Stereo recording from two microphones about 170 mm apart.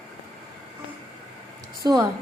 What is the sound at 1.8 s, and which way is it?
Speech, 20° right (ahead or behind).